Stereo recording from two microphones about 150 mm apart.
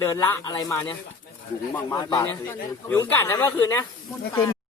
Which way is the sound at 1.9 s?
25° left (ahead or behind).